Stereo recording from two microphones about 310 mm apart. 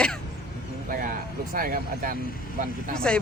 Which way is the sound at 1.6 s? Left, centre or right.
Right.